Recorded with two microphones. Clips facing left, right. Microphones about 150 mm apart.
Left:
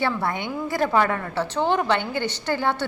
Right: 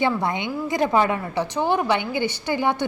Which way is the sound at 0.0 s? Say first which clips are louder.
Right 2 dB; 20° right (ahead or behind).